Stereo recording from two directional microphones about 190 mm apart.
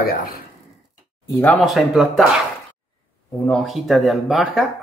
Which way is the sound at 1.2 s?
10° left (ahead or behind).